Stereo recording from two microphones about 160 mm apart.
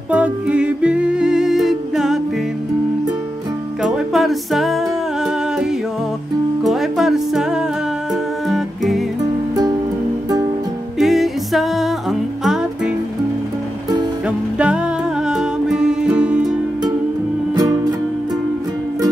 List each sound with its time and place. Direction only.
0.1 s music: 10° right (ahead or behind)
3.8 s music: centre (ahead or behind)
11.0 s music: centre (ahead or behind)
14.2 s music: 5° right (ahead or behind)
17.6 s music: 25° right (ahead or behind)